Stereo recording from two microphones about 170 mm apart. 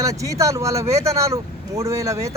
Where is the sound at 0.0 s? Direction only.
20° right (ahead or behind).